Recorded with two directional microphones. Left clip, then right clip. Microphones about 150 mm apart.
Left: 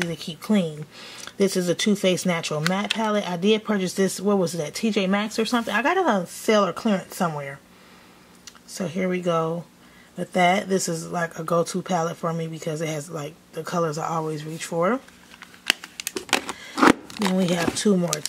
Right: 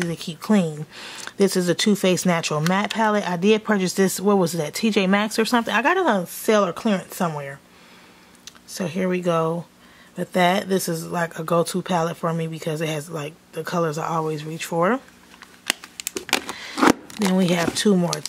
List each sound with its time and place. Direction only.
0.1 s speech: 25° right (ahead or behind)
15.6 s a sound: 5° right (ahead or behind)
17.7 s speech: 25° right (ahead or behind)